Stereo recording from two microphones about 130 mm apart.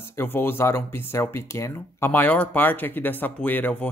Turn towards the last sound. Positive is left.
turn(degrees=15)  # may be behind; listen again after turning